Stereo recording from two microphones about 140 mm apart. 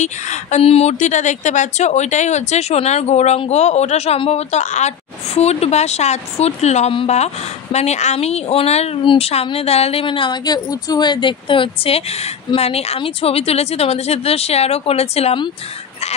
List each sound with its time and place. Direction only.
0.0 s a woman's voice: 55° left (ahead or behind)